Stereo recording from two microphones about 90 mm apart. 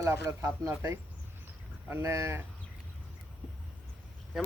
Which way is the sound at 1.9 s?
30° right (ahead or behind).